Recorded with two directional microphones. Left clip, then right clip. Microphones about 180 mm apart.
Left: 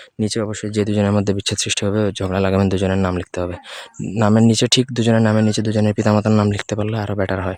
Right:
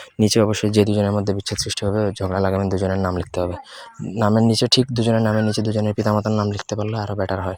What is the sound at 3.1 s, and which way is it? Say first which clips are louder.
Speech: even; 10° left (ahead or behind).